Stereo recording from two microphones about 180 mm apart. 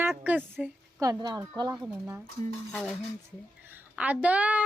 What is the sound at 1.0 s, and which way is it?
A woman's voice, 20° right (ahead or behind).